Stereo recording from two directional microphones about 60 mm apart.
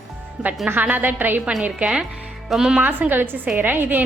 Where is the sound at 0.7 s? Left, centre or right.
Right.